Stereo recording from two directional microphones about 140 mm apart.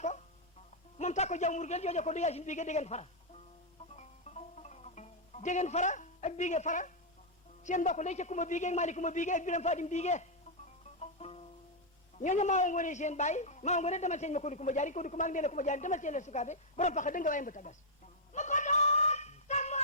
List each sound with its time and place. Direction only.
0.9 s a man's voice: 55° left (ahead or behind)
3.9 s music: 55° left (ahead or behind)
7.6 s a man's voice: 60° left (ahead or behind)
11.0 s music: 45° left (ahead or behind)
12.2 s a man's voice: 60° left (ahead or behind)
18.3 s a sound: 60° left (ahead or behind)